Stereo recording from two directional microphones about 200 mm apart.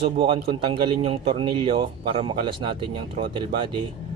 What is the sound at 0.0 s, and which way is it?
Speech, 25° right (ahead or behind).